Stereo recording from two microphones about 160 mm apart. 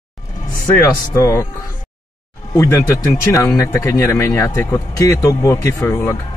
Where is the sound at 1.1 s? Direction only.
20° left (ahead or behind).